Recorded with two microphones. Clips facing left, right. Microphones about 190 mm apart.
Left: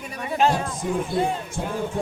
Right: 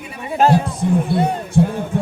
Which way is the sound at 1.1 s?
65° right (ahead or behind).